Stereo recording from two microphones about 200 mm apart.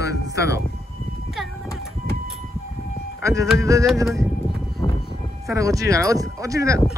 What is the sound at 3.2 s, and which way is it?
Speech, 15° right (ahead or behind).